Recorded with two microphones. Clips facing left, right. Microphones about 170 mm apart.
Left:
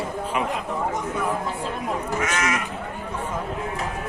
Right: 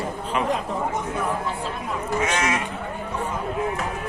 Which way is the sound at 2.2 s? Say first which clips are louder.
Right 3 dB; 30° right (ahead or behind).